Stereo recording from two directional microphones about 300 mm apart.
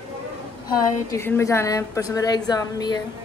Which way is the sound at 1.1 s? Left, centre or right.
Centre.